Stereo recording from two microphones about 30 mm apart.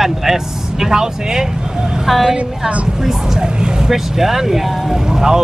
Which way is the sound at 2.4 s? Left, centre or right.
Right.